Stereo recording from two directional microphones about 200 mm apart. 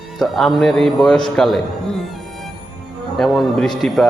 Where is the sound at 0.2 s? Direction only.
Centre (ahead or behind).